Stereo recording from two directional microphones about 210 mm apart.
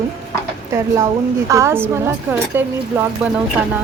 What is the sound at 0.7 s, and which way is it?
A woman's voice, 15° right (ahead or behind).